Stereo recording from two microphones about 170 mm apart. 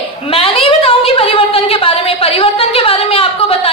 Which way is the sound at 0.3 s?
35° left (ahead or behind).